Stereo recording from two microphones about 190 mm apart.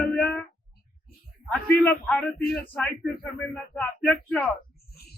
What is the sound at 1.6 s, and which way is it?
Speech, 10° left (ahead or behind).